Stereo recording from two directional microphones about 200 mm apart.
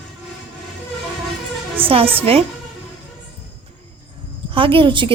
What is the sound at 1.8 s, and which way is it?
Speech, 30° right (ahead or behind).